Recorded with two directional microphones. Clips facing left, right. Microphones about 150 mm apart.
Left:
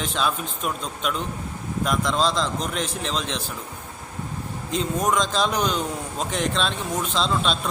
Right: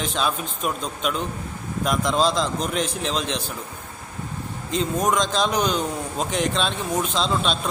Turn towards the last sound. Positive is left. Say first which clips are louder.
# even
turn(degrees=0)  # may be behind; listen again after turning